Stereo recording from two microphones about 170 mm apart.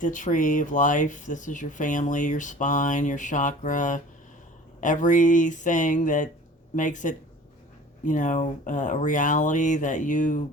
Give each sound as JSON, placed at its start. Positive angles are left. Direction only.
{"t": 0.0, "sound": "speech", "side_deg": 50}